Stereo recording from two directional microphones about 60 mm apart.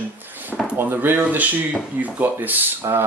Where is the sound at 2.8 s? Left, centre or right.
Right.